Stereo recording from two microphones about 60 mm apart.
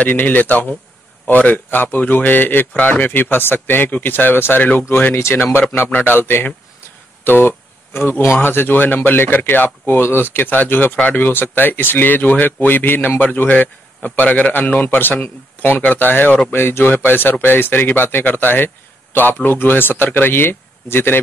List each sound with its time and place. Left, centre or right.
0.0 s speech: left